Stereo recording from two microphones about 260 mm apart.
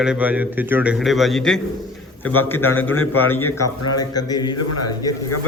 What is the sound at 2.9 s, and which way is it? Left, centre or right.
Speech, left.